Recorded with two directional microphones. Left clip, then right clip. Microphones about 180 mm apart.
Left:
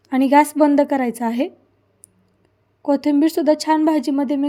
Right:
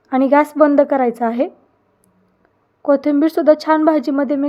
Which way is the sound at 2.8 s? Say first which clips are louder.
Right 3 dB; 25° left (ahead or behind).